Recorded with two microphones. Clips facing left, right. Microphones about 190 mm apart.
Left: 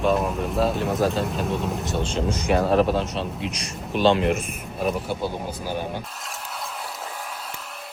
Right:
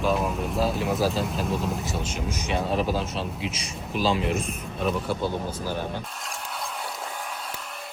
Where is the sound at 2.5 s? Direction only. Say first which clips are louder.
Left 6 dB; 65° left (ahead or behind).